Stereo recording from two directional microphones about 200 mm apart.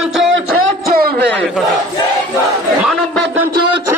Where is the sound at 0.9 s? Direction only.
50° right (ahead or behind).